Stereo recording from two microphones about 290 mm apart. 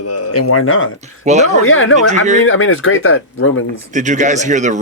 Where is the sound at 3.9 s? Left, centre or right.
Right.